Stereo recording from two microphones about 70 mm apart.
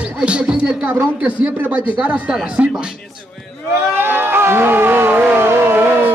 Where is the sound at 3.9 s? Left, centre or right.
Right.